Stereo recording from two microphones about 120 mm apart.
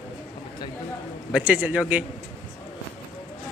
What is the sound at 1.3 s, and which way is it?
Speech, 10° right (ahead or behind).